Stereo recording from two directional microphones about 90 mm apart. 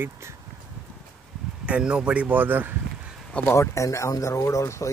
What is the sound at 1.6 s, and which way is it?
Speech, 15° right (ahead or behind).